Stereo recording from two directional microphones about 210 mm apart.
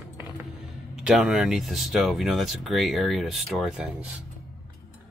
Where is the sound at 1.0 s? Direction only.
5° right (ahead or behind).